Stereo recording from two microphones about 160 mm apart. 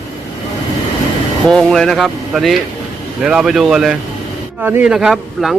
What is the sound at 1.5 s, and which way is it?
A man's voice, 5° left (ahead or behind).